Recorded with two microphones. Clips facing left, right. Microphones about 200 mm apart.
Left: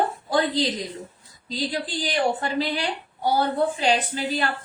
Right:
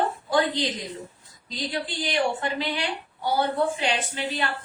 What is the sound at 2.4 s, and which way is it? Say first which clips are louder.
A woman's voice: left 3 dB; 35° left (ahead or behind).